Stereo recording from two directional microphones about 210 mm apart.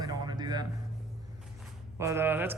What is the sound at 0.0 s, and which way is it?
Music, 20° right (ahead or behind).